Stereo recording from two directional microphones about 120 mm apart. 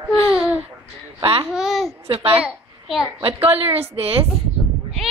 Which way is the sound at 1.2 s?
50° right (ahead or behind).